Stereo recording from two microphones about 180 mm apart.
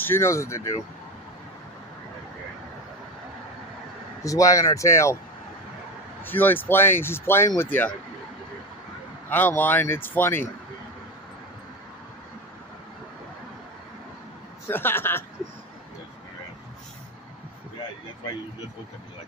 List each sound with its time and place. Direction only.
0.0 s speech: 15° left (ahead or behind)
4.2 s speech: 20° left (ahead or behind)
6.2 s speech: 10° left (ahead or behind)
9.3 s speech: 10° left (ahead or behind)
14.7 s speech: 10° left (ahead or behind)